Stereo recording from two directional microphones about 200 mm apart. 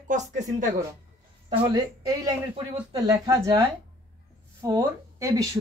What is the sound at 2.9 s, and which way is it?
Speech, 20° right (ahead or behind).